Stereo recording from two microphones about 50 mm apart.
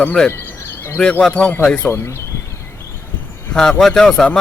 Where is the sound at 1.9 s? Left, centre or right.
Left.